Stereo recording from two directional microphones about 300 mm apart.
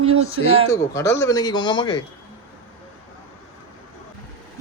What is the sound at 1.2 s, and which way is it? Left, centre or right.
Speech, centre.